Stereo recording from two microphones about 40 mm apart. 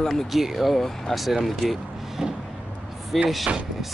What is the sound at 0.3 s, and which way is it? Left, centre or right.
Speech, centre.